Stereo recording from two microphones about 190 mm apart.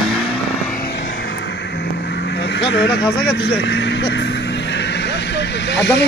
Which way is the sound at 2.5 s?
70° left (ahead or behind).